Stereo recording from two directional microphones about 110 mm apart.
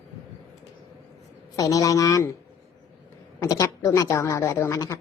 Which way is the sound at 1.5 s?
30° left (ahead or behind).